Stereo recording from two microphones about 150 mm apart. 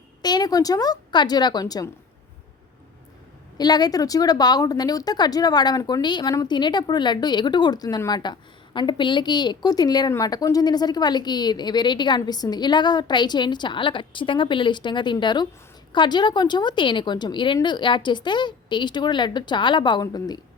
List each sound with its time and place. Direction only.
0.2 s a woman's voice: 25° left (ahead or behind)
3.6 s speech: 25° left (ahead or behind)